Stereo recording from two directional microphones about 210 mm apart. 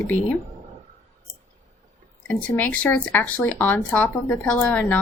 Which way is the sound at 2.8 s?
10° left (ahead or behind).